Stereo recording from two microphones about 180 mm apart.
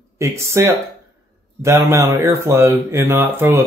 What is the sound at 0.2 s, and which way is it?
Speech, 15° right (ahead or behind).